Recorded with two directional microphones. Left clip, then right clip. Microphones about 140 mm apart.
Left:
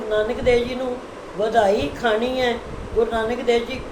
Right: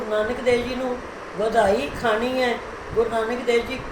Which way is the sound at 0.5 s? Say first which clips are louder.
Left 3 dB; 15° left (ahead or behind).